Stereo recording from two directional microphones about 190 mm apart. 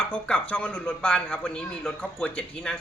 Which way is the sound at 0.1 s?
5° left (ahead or behind).